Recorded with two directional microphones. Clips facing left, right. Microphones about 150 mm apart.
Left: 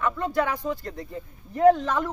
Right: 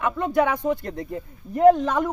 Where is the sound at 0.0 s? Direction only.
15° right (ahead or behind).